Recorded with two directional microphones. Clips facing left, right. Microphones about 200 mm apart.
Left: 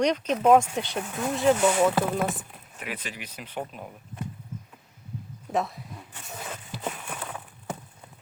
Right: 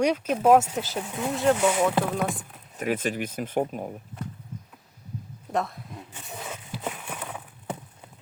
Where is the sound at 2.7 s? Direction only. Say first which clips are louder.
Right 10 dB; 45° right (ahead or behind).